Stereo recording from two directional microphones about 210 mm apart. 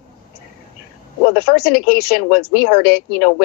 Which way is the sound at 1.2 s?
45° left (ahead or behind).